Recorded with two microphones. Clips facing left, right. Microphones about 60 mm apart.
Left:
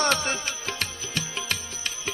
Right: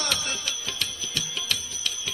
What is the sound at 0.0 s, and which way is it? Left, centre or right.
Music, left.